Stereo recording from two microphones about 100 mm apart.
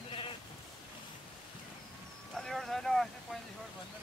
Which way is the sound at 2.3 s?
5° left (ahead or behind).